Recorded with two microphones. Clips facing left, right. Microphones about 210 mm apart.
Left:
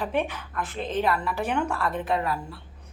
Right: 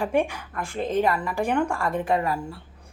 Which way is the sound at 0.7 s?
45° right (ahead or behind).